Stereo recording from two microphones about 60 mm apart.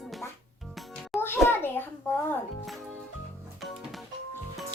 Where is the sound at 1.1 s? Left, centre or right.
Left.